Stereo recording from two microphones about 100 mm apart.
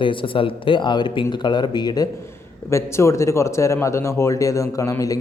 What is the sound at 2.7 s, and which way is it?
Speech, 30° left (ahead or behind).